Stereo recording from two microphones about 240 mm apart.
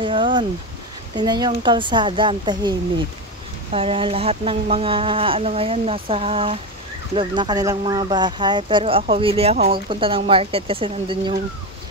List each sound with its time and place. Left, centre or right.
0.0 s a sound: right
1.1 s speech: centre
3.7 s speech: right